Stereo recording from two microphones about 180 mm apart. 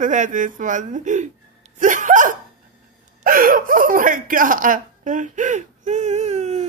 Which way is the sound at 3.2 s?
50° right (ahead or behind).